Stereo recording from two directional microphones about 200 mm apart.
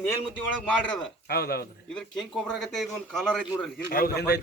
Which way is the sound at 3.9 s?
50° left (ahead or behind).